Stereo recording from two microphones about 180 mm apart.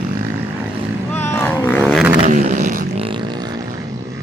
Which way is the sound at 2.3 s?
45° right (ahead or behind).